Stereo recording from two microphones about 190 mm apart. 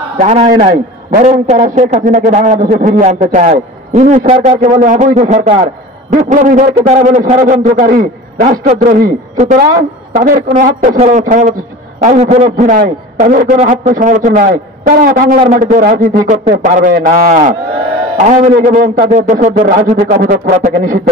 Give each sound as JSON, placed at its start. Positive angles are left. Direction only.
{"t": 0.2, "sound": "a man's voice", "side_deg": -35}